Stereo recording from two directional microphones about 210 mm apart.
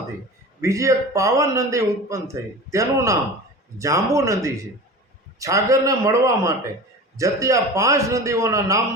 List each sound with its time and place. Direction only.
0.6 s a man's voice: 15° right (ahead or behind)